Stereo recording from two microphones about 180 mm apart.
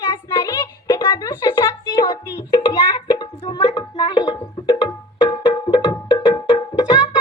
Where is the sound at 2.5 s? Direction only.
30° left (ahead or behind).